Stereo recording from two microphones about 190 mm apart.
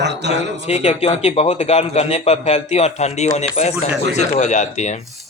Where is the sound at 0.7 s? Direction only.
35° left (ahead or behind).